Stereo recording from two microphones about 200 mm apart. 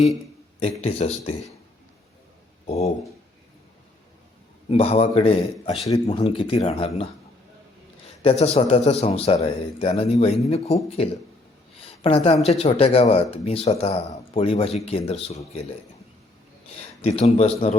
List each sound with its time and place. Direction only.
0.6 s speech: 30° left (ahead or behind)
2.6 s speech: 30° left (ahead or behind)
4.7 s speech: 30° left (ahead or behind)
11.8 s a sound: 30° left (ahead or behind)
12.5 s speech: 30° left (ahead or behind)
16.6 s speech: 30° left (ahead or behind)